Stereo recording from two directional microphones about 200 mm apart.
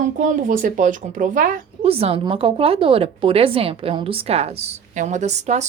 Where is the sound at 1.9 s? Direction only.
30° right (ahead or behind).